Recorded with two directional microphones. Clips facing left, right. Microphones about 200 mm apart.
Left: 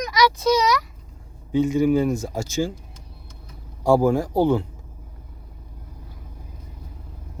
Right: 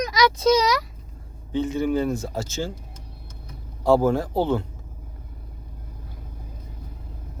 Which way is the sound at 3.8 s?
10° left (ahead or behind).